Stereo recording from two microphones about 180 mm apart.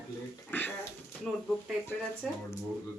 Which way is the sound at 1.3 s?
5° left (ahead or behind).